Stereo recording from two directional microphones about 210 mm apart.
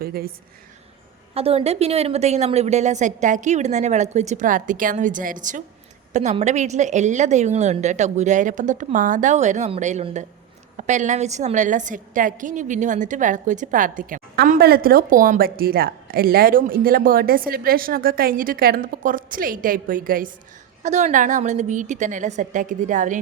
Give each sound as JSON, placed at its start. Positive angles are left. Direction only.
{"t": 0.0, "sound": "a woman's voice", "side_deg": -45}
{"t": 1.3, "sound": "a woman's voice", "side_deg": -30}